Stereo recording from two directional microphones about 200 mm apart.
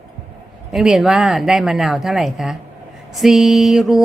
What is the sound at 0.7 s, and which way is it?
A woman's voice, centre (ahead or behind).